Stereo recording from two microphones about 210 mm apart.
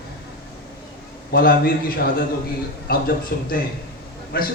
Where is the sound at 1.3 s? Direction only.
45° left (ahead or behind).